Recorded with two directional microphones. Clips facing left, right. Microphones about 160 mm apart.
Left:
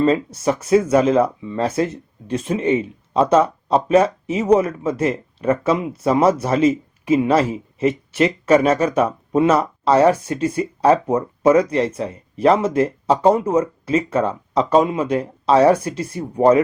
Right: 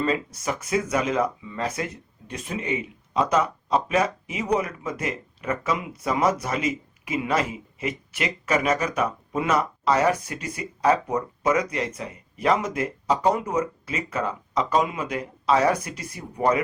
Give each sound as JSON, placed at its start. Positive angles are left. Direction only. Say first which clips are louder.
{"t": 0.0, "sound": "speech", "louder": "left 8 dB", "side_deg": 30}